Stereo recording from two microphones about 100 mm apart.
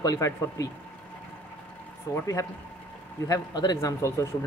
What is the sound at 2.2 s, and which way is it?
Speech, 35° left (ahead or behind).